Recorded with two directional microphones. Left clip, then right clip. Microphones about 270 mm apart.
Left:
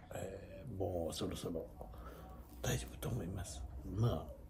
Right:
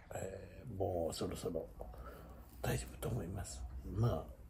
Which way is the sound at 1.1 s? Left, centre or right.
Centre.